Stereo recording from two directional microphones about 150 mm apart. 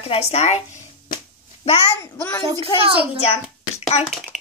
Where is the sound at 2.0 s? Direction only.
15° left (ahead or behind).